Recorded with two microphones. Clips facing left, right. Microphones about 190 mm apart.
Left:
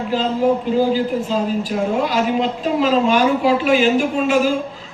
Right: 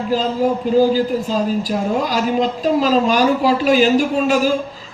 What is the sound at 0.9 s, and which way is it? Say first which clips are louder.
A woman's voice: right 1 dB; 40° right (ahead or behind).